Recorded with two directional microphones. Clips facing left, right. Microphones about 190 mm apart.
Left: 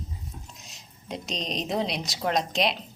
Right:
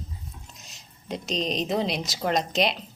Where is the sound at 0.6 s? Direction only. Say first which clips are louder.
Left 1 dB; centre (ahead or behind).